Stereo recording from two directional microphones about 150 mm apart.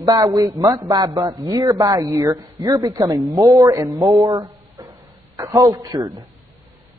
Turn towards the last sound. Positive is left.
turn(degrees=-25)  # may be behind; listen again after turning